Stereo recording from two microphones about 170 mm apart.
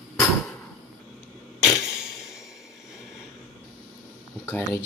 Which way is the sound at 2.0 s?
5° right (ahead or behind).